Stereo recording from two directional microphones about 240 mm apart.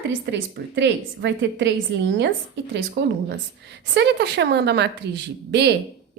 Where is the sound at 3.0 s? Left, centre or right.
Right.